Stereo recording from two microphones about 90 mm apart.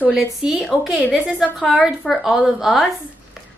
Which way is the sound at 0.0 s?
15° right (ahead or behind).